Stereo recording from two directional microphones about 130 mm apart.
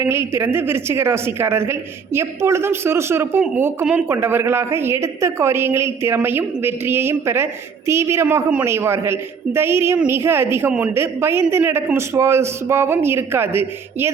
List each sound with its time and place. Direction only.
0.0 s a woman's voice: 20° right (ahead or behind)